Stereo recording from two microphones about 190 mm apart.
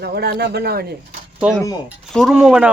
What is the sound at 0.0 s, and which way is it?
Speech, 55° right (ahead or behind).